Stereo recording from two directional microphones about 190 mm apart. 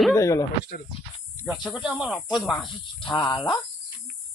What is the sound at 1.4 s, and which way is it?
A man's voice, 5° right (ahead or behind).